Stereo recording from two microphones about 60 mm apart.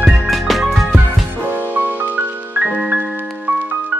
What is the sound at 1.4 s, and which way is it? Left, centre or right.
Music, right.